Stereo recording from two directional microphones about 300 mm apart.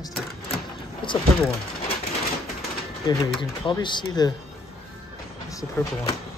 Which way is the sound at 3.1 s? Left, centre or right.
Centre.